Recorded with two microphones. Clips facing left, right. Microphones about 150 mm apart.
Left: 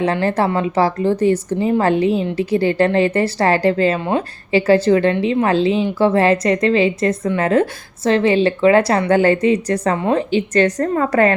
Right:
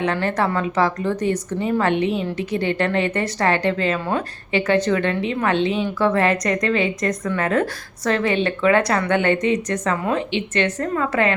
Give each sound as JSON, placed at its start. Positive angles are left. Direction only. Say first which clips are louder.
{"t": 0.0, "sound": "a woman's voice", "louder": "left 4 dB", "side_deg": 30}